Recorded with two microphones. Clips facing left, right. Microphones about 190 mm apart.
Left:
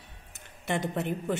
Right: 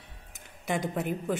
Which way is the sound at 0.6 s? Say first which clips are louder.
Even; 5° right (ahead or behind).